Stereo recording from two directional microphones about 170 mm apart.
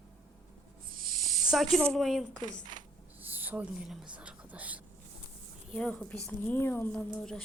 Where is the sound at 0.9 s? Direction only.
55° right (ahead or behind).